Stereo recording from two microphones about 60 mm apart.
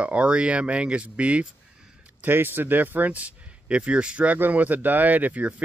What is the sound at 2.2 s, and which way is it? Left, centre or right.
Speech, right.